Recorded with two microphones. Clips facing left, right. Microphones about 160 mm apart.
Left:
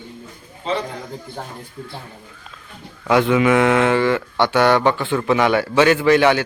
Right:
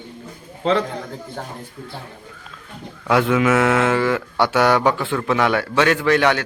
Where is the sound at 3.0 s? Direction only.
Centre (ahead or behind).